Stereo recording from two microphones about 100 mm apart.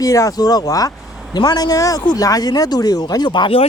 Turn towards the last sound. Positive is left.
turn(degrees=55)  # may be behind; listen again after turning